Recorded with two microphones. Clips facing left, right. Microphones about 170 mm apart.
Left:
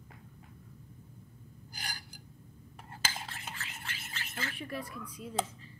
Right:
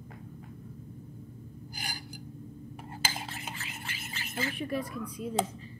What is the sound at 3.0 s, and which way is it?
Cutlery, 5° right (ahead or behind).